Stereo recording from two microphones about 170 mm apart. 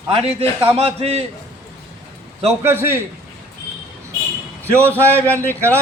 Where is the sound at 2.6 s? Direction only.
15° right (ahead or behind).